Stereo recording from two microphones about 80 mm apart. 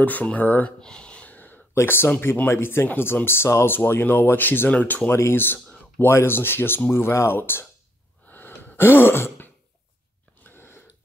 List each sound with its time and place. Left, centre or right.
0.0 s speech: left
5.1 s speech: left
8.3 s gasp: left
10.4 s a sound: left